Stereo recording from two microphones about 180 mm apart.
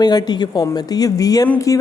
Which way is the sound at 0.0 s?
20° left (ahead or behind).